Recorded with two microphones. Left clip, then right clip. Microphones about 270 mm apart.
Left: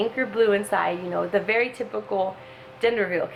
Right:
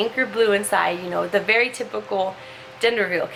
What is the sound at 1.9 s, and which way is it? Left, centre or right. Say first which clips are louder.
Speech: even; left.